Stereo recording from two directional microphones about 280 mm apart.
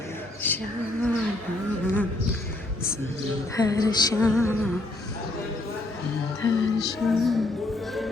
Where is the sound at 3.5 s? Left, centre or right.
Centre.